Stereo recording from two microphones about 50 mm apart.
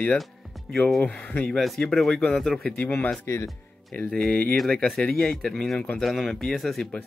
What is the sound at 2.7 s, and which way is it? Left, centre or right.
Speech, left.